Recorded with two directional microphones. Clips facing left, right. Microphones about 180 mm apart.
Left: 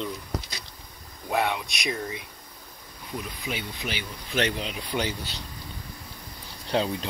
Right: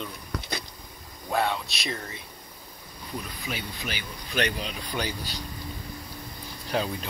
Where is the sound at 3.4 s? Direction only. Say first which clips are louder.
Left 2 dB; 20° left (ahead or behind).